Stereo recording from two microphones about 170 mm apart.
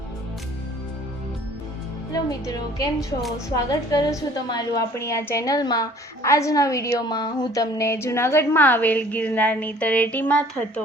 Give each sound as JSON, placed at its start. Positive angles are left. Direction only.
{"t": 2.1, "sound": "a woman's voice", "side_deg": 20}
{"t": 3.2, "sound": "a woman's voice", "side_deg": 0}
{"t": 3.5, "sound": "a woman's voice", "side_deg": 20}